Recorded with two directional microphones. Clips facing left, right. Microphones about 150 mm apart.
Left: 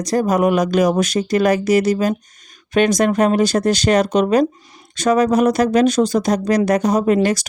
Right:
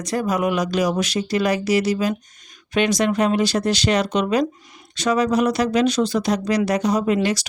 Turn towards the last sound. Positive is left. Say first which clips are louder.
# left 4 dB
turn(degrees=45)  # may be behind; listen again after turning